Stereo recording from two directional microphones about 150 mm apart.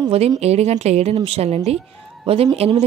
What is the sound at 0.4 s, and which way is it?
A woman's voice, 45° right (ahead or behind).